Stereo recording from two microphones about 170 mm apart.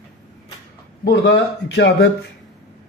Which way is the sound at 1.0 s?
80° left.